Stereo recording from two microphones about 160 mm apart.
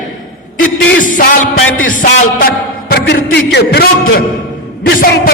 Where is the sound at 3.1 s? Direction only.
90° left.